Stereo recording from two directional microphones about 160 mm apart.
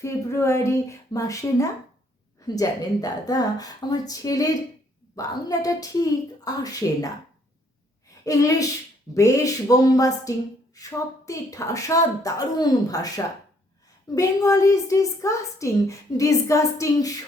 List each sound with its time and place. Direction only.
0.0 s a woman's voice: 20° left (ahead or behind)
8.2 s a woman's voice: 20° left (ahead or behind)